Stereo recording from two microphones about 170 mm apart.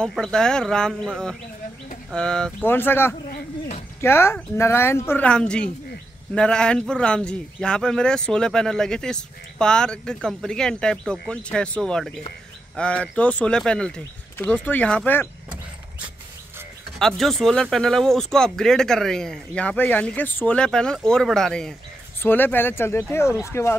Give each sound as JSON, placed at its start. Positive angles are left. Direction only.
{"t": 0.0, "sound": "speech", "side_deg": 5}
{"t": 2.0, "sound": "speech", "side_deg": 5}
{"t": 17.0, "sound": "speech", "side_deg": 0}